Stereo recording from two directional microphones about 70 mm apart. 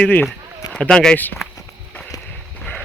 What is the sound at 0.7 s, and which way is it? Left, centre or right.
Speech, centre.